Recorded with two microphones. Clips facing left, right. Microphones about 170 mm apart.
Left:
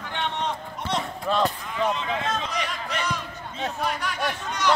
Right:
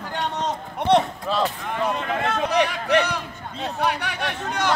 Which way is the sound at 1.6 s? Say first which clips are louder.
Right 1 dB; 60° right (ahead or behind).